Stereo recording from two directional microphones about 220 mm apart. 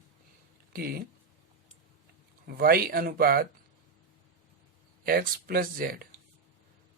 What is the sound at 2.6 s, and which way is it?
Speech, 45° right (ahead or behind).